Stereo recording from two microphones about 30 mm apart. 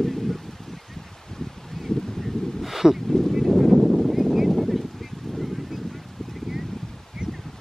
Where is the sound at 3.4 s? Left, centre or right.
Centre.